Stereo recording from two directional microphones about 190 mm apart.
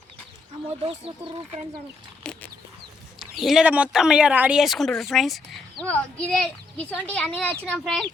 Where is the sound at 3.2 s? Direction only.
Centre (ahead or behind).